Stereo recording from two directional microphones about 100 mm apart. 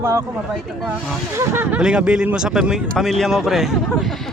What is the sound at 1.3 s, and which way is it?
Speech, 25° right (ahead or behind).